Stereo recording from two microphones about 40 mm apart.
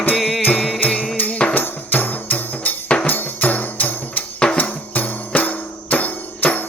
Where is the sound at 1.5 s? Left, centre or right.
Left.